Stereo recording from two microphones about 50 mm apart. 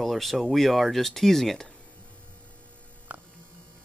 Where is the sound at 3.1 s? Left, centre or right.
Right.